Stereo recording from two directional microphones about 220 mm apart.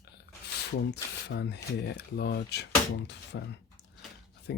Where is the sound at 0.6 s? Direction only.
50° left (ahead or behind).